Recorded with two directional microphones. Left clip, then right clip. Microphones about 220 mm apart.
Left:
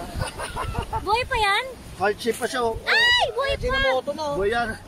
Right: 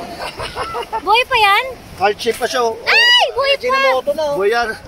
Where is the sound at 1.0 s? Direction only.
5° right (ahead or behind).